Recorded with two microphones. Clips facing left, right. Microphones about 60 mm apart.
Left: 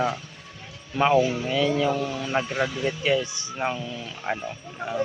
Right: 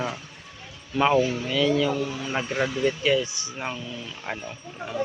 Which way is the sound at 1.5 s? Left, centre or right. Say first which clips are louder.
Even; left.